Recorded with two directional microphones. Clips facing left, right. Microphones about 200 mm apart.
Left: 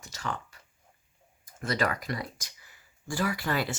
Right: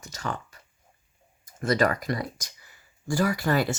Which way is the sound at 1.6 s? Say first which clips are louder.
Right 6 dB; 45° right (ahead or behind).